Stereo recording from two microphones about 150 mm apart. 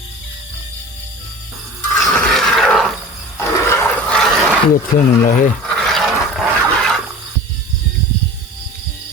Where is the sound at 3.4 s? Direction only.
15° left (ahead or behind).